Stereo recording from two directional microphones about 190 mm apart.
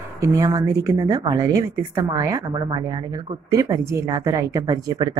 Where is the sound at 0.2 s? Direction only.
15° right (ahead or behind).